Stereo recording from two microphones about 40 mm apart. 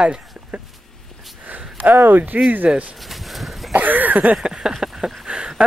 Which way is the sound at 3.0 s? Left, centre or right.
Centre.